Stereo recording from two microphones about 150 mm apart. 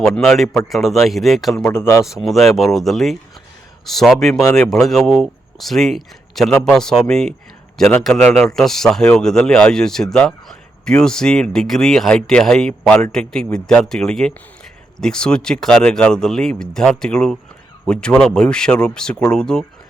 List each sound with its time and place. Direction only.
0.0 s speech: centre (ahead or behind)
0.4 s a man's voice: 20° left (ahead or behind)
0.7 s speech: centre (ahead or behind)
1.7 s speech: 15° left (ahead or behind)
2.0 s speech: centre (ahead or behind)